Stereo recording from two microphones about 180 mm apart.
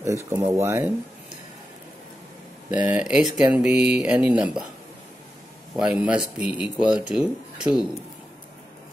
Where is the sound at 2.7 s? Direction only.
10° right (ahead or behind).